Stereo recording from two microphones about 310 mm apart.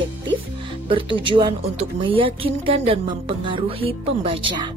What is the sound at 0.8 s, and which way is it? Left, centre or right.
Speech, centre.